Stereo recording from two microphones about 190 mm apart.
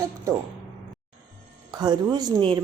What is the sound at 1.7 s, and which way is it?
Speech, 20° right (ahead or behind).